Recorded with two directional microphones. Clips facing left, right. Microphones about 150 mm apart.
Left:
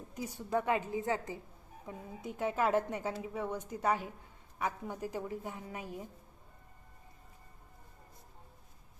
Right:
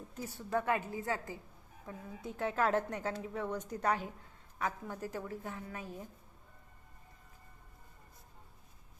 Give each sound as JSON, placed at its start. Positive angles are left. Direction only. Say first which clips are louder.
{"t": 0.1, "sound": "a woman's voice", "louder": "left 2 dB", "side_deg": 15}